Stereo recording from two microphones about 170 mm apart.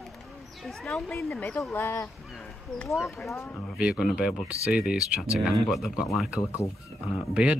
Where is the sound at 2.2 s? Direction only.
Centre (ahead or behind).